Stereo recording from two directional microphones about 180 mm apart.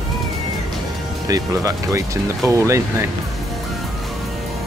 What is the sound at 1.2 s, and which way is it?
Speech, 20° right (ahead or behind).